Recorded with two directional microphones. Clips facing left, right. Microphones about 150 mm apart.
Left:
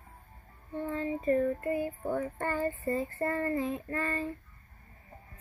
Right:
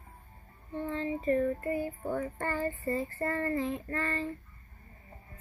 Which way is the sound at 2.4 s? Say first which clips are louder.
Left 1 dB; 15° left (ahead or behind).